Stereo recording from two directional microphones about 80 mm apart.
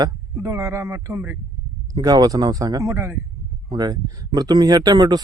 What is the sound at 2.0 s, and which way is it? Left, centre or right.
A man's voice, right.